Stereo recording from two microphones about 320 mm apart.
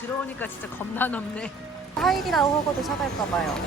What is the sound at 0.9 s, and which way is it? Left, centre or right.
A woman's voice, centre.